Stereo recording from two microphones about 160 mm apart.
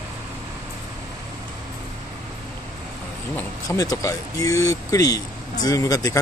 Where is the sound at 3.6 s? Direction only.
20° left (ahead or behind).